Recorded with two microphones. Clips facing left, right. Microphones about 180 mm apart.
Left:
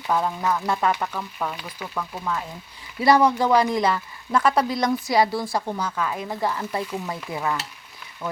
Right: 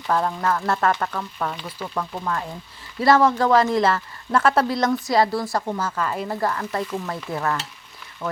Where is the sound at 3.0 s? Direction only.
20° left (ahead or behind).